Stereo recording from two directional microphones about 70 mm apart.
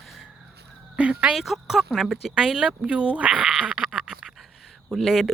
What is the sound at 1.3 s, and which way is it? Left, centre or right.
A woman's voice, centre.